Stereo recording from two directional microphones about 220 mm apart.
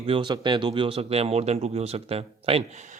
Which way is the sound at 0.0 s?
25° right (ahead or behind).